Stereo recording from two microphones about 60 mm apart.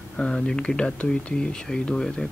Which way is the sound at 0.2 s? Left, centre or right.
Centre.